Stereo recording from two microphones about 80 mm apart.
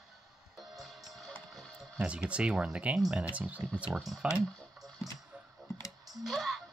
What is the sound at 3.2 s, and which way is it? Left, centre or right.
Speech, centre.